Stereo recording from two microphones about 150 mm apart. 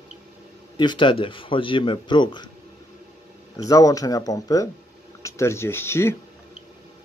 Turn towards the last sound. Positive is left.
turn(degrees=15)  # may be behind; listen again after turning